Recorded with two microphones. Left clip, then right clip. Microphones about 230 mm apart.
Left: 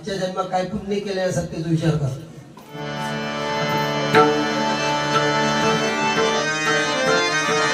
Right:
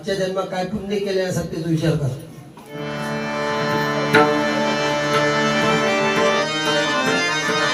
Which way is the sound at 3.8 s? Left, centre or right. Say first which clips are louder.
Right 1 dB; centre.